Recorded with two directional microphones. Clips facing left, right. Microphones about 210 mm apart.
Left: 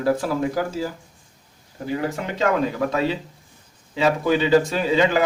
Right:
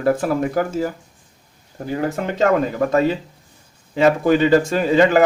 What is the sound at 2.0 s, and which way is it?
A man's voice, 50° right (ahead or behind).